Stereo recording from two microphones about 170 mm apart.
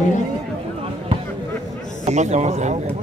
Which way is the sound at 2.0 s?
45° right (ahead or behind).